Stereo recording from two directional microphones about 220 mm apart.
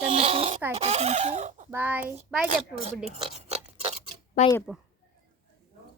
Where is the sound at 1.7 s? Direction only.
10° right (ahead or behind).